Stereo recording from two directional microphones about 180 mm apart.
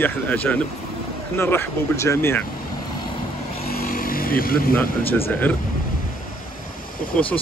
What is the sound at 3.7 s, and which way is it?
Vehicle, 55° left (ahead or behind).